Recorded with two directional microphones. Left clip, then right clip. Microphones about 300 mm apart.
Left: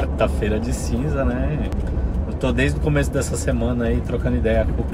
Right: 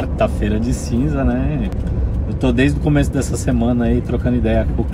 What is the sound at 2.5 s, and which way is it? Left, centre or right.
Speech, centre.